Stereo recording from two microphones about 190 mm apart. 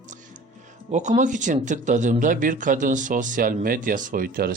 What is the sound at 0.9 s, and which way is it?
Speech, 40° right (ahead or behind).